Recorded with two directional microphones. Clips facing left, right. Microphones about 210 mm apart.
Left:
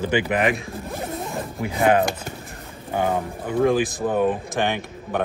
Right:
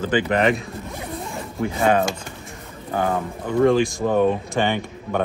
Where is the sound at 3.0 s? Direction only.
20° left (ahead or behind).